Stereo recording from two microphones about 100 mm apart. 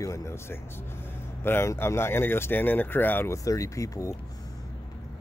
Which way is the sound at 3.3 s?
35° left (ahead or behind).